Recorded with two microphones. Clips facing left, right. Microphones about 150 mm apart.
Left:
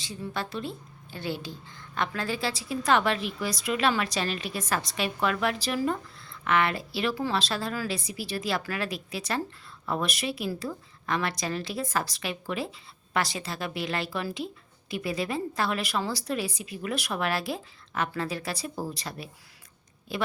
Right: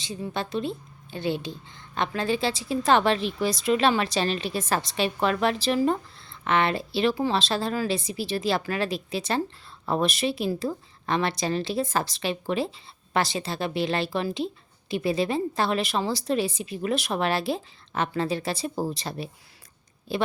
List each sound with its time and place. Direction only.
0.0 s a woman's voice: 20° right (ahead or behind)